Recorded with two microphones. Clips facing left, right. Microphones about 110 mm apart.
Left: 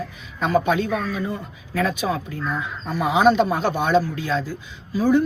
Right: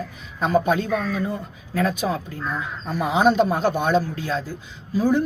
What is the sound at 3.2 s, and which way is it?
Speech, 40° right (ahead or behind).